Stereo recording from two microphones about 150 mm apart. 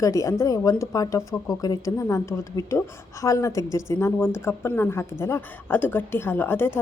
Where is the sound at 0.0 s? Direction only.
20° left (ahead or behind).